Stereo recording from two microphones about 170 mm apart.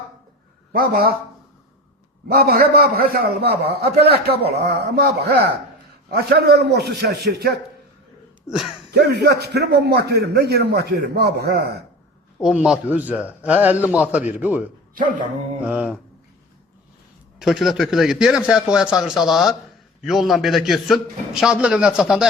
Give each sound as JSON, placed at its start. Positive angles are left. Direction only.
{"t": 0.7, "sound": "a man's voice", "side_deg": -60}
{"t": 2.2, "sound": "a man's voice", "side_deg": -65}
{"t": 8.4, "sound": "speech", "side_deg": 0}
{"t": 8.9, "sound": "a man's voice", "side_deg": -75}
{"t": 12.4, "sound": "a man's voice", "side_deg": -5}
{"t": 17.4, "sound": "speech", "side_deg": 0}